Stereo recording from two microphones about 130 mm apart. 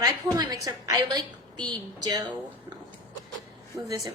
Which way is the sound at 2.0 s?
35° right (ahead or behind).